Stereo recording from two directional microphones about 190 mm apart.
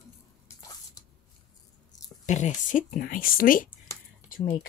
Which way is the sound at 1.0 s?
20° left (ahead or behind).